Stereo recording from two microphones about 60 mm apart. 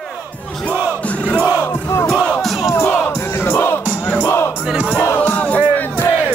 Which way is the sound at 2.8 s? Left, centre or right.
Left.